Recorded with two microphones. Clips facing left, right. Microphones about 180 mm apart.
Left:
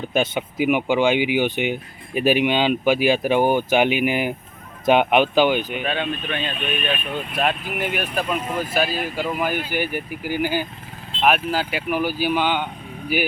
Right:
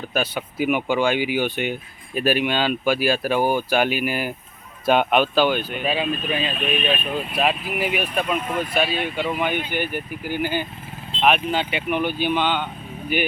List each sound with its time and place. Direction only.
0.1 s speech: 20° left (ahead or behind)
5.8 s speech: 5° right (ahead or behind)